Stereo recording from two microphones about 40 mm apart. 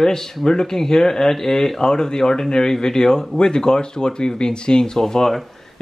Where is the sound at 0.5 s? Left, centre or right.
Centre.